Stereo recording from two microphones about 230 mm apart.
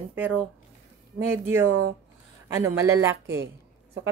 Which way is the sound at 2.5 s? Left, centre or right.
Centre.